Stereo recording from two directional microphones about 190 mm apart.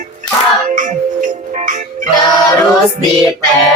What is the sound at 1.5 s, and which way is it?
Music, 40° right (ahead or behind).